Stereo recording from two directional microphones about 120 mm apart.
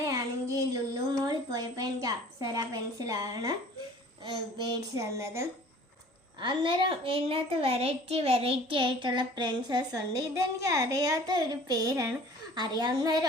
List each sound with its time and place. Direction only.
0.0 s a sound: 30° right (ahead or behind)
4.2 s a woman's voice: 30° right (ahead or behind)
6.4 s a child's voice: 40° right (ahead or behind)